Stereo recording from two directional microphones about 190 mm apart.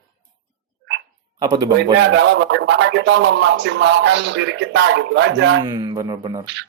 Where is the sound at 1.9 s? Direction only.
65° right (ahead or behind).